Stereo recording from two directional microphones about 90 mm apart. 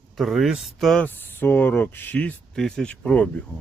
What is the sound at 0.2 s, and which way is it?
Speech, centre (ahead or behind).